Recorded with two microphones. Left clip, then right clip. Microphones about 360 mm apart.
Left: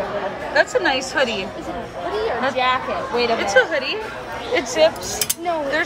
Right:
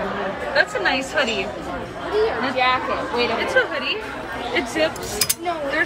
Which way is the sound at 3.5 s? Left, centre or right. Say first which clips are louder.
Left 3 dB; centre.